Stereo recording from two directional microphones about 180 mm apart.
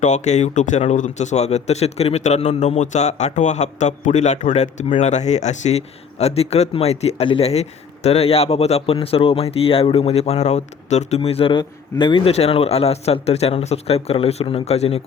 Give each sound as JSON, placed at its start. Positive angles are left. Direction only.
{"t": 0.0, "sound": "a man's voice", "side_deg": 40}